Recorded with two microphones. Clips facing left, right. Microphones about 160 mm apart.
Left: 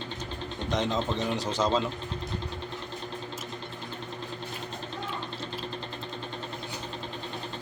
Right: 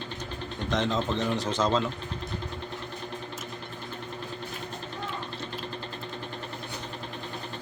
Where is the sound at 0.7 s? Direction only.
15° left (ahead or behind).